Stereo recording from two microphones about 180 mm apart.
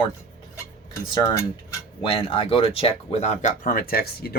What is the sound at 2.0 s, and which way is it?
Speech, 30° left (ahead or behind).